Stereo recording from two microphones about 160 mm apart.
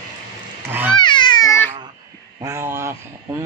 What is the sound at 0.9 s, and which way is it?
Babbling, 30° left (ahead or behind).